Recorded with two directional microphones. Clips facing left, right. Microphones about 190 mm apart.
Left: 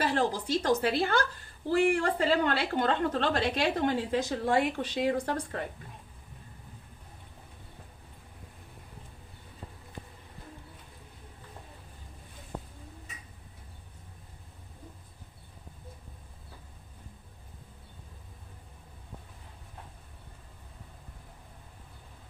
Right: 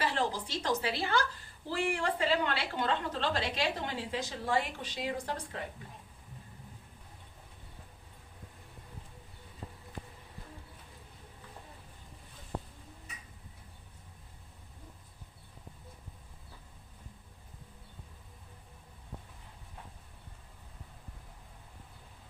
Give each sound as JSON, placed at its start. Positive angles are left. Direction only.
{"t": 0.0, "sound": "a woman's voice", "side_deg": 45}